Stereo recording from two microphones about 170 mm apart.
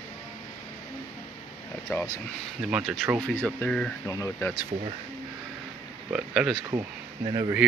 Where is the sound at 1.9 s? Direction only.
15° left (ahead or behind).